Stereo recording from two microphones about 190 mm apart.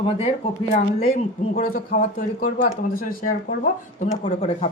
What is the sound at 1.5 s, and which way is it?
A man's voice, 50° left (ahead or behind).